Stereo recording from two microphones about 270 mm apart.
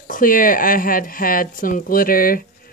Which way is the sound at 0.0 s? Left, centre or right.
Left.